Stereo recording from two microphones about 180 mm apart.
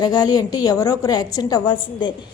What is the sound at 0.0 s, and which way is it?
A woman's voice, 20° left (ahead or behind).